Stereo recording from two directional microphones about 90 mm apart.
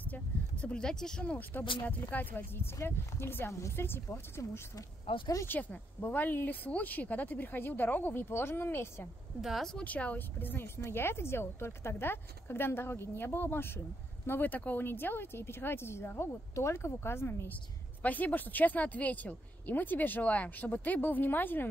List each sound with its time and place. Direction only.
0.0 s speech: 15° left (ahead or behind)
5.0 s speech: 75° left (ahead or behind)
5.5 s speech: 20° left (ahead or behind)
9.4 s speech: centre (ahead or behind)
9.8 s speech: 15° left (ahead or behind)